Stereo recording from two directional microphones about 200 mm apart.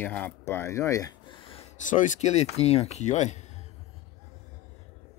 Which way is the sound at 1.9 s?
35° left (ahead or behind).